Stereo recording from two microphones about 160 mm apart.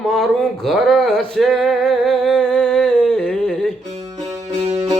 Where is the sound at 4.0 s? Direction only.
25° right (ahead or behind).